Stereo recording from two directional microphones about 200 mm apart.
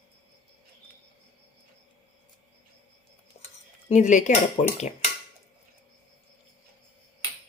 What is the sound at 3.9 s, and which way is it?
Speech, 35° left (ahead or behind).